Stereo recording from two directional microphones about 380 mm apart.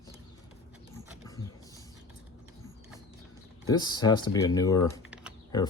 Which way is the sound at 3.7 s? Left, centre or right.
Centre.